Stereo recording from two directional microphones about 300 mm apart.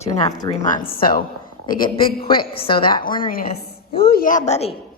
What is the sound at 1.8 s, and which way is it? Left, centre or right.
A woman's voice, centre.